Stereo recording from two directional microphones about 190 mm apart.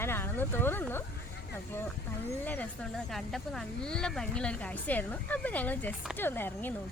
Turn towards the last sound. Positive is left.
turn(degrees=10)  # may be behind; listen again after turning